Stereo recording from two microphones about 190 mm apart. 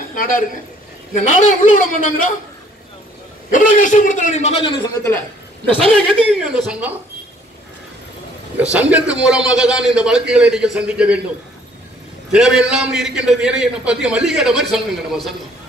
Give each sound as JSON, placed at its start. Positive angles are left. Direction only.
{"t": 0.1, "sound": "a man's voice", "side_deg": 45}
{"t": 3.5, "sound": "a man's voice", "side_deg": 45}
{"t": 5.8, "sound": "a man's voice", "side_deg": 0}
{"t": 8.7, "sound": "a man's voice", "side_deg": -5}
{"t": 12.3, "sound": "a man's voice", "side_deg": -5}